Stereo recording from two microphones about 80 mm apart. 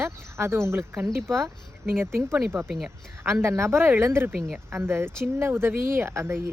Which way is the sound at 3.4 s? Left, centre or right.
Right.